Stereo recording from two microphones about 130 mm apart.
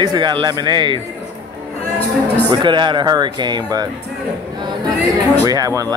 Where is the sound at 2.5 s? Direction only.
35° right (ahead or behind).